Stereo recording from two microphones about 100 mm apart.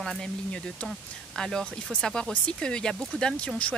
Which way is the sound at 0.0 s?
5° left (ahead or behind).